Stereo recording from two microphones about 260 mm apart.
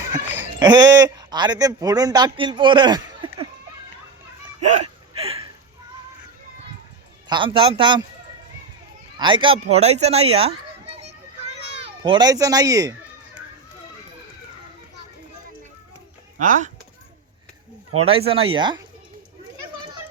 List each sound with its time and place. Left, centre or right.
0.6 s a man's voice: centre
4.6 s hiccup: right
7.3 s speech: centre
9.1 s a child's voice: centre
9.7 s children playing: right
16.4 s speech: right
18.0 s speech: right